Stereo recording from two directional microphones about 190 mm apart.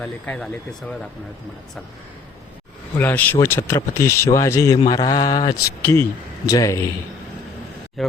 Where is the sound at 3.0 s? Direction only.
10° left (ahead or behind).